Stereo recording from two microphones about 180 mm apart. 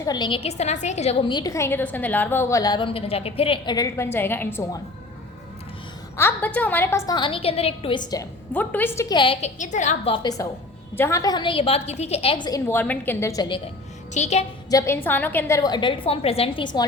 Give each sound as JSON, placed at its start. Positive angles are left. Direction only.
{"t": 0.0, "sound": "a woman's voice", "side_deg": 25}
{"t": 1.3, "sound": "a woman's voice", "side_deg": 20}
{"t": 6.1, "sound": "a woman's voice", "side_deg": 10}
{"t": 8.5, "sound": "a woman's voice", "side_deg": 10}
{"t": 9.1, "sound": "a woman's voice", "side_deg": 30}
{"t": 10.4, "sound": "a woman's voice", "side_deg": 20}
{"t": 14.1, "sound": "a woman's voice", "side_deg": 40}
{"t": 14.7, "sound": "a woman's voice", "side_deg": 15}